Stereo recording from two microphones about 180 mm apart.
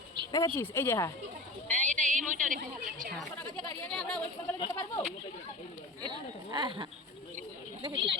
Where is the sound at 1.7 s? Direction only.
40° right (ahead or behind).